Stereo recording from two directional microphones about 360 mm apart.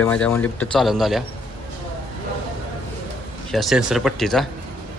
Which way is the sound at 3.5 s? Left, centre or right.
Centre.